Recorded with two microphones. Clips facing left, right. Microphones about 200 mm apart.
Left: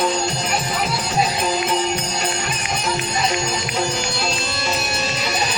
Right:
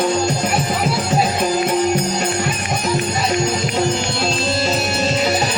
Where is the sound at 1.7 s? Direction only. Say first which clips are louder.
Right 5 dB; 50° right (ahead or behind).